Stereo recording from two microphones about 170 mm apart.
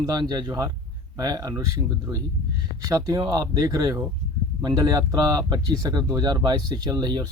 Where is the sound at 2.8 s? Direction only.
20° right (ahead or behind).